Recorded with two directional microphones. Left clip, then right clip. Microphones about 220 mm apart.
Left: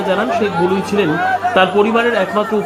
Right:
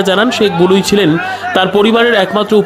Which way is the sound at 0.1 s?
35° right (ahead or behind).